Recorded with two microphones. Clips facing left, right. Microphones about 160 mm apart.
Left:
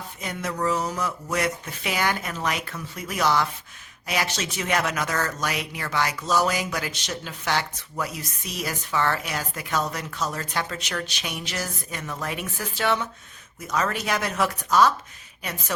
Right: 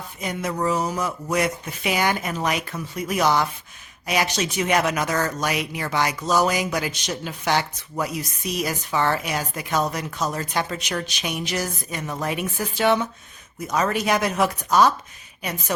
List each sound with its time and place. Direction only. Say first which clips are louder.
0.2 s speech: right 3 dB; 15° right (ahead or behind)